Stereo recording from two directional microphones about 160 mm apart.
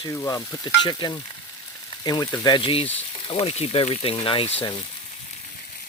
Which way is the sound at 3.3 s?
40° left (ahead or behind).